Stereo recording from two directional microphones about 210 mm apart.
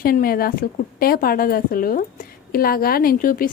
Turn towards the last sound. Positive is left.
turn(degrees=40)  # may be behind; listen again after turning